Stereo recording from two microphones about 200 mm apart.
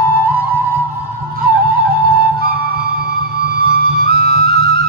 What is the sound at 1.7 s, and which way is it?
Music, 50° right (ahead or behind).